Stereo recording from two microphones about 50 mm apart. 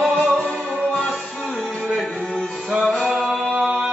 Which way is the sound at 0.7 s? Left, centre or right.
Centre.